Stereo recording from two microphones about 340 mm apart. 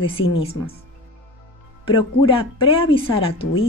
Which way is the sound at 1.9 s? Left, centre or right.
Centre.